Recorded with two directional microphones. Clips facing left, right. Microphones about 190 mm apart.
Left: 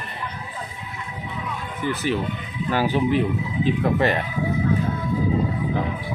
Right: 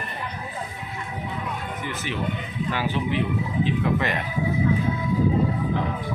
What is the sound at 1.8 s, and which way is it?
Speech, 35° left (ahead or behind).